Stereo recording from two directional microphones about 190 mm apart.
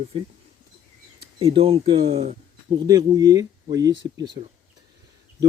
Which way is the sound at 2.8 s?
20° right (ahead or behind).